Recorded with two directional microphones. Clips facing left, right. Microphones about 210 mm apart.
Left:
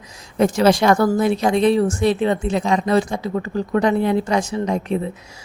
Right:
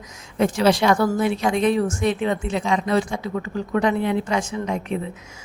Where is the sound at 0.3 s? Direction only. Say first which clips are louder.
Left 3 dB; 40° left (ahead or behind).